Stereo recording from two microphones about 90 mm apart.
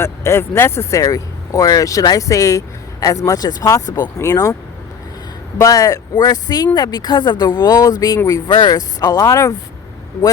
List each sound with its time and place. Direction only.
0.0 s speech: 30° left (ahead or behind)
5.5 s speech: 35° left (ahead or behind)